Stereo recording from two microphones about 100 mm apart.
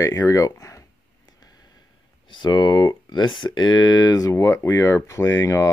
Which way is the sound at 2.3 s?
50° left (ahead or behind).